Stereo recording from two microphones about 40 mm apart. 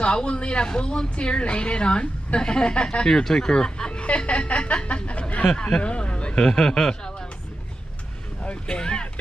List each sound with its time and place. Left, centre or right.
0.0 s speech: left
3.1 s speech: centre
8.5 s speech: left